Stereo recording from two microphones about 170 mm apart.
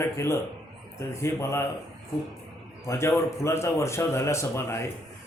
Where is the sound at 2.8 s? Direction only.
15° left (ahead or behind).